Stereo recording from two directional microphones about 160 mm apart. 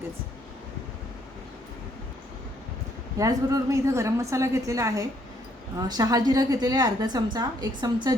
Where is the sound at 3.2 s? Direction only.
20° right (ahead or behind).